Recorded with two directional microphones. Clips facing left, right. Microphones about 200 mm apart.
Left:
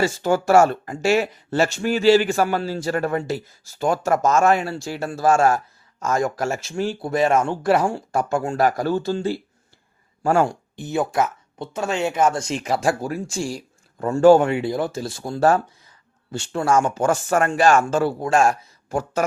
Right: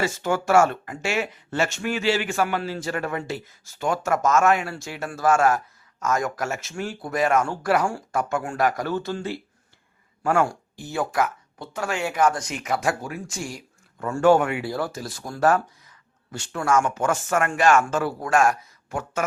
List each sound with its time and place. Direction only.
0.0 s speech: 35° left (ahead or behind)
10.4 s speech: 20° left (ahead or behind)